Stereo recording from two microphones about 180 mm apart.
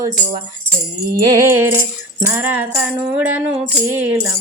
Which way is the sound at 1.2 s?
20° right (ahead or behind).